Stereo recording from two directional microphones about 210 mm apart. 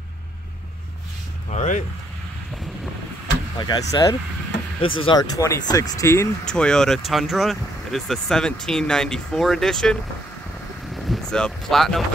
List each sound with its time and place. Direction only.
1.5 s speech: 35° left (ahead or behind)
3.5 s speech: 20° left (ahead or behind); by 9.9 s centre (ahead or behind)
11.1 s speech: 5° left (ahead or behind)